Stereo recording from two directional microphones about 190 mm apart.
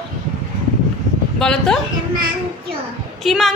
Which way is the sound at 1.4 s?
5° left (ahead or behind).